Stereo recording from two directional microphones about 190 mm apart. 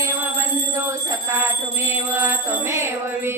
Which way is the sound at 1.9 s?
10° right (ahead or behind).